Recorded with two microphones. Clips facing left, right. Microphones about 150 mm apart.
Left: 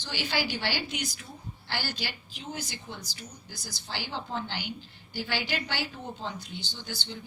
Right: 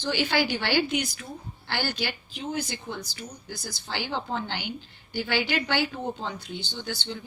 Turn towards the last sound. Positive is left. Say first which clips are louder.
# right 6 dB
turn(degrees=-65)  # may be behind; listen again after turning